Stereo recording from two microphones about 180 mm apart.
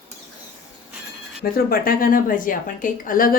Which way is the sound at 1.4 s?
55° left (ahead or behind).